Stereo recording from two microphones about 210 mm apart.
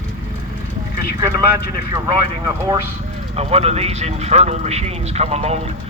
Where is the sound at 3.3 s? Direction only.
30° right (ahead or behind).